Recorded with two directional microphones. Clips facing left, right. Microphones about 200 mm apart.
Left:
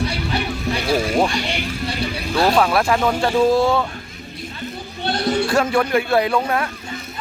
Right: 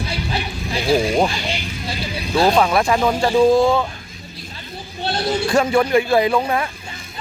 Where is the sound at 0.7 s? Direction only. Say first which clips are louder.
Right 3 dB; 25° right (ahead or behind).